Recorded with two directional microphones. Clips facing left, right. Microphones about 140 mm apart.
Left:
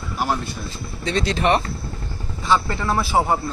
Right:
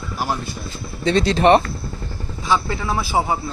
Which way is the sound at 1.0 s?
30° right (ahead or behind).